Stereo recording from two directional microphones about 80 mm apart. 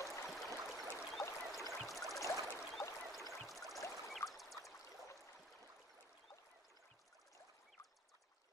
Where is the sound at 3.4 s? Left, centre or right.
Centre.